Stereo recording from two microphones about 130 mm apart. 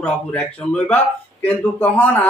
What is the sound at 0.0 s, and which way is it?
Speech, 10° left (ahead or behind).